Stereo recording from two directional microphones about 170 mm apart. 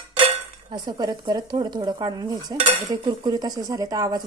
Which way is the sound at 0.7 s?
25° right (ahead or behind).